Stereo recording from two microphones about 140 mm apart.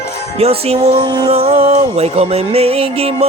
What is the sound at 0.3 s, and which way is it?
Music, 45° right (ahead or behind).